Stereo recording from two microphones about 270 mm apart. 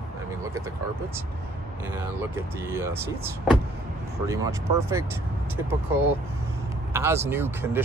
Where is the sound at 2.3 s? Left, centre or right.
Centre.